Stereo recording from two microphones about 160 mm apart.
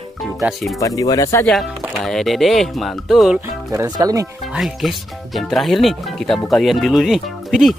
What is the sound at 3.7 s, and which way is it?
Speech, 25° right (ahead or behind).